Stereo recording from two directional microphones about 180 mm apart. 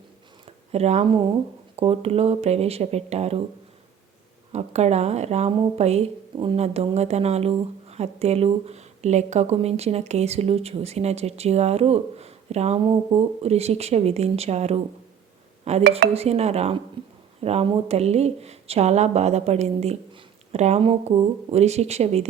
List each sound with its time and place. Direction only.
0.4 s a woman's voice: 35° right (ahead or behind)
4.5 s a woman's voice: 35° right (ahead or behind)
17.0 s a sound: 30° right (ahead or behind)
17.4 s a woman's voice: 35° right (ahead or behind)